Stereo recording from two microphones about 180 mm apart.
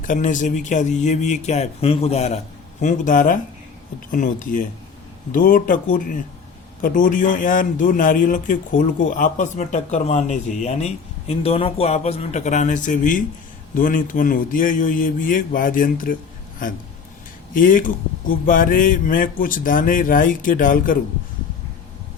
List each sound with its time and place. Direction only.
0.0 s speech: 45° left (ahead or behind)
17.5 s speech: 50° left (ahead or behind)